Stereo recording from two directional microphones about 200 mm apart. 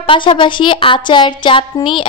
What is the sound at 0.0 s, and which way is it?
A child's voice, 25° left (ahead or behind).